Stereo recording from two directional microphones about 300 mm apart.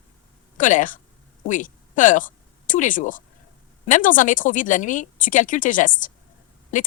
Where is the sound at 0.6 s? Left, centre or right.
Left.